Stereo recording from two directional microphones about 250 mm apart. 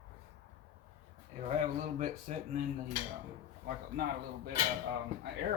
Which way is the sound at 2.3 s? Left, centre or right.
Right.